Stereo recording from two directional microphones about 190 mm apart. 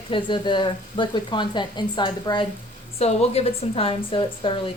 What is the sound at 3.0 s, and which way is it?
Speech, 35° left (ahead or behind).